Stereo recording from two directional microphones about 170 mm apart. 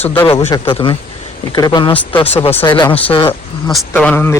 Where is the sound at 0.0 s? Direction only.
10° left (ahead or behind).